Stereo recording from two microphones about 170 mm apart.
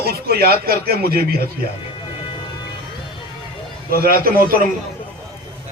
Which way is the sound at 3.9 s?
60° right (ahead or behind).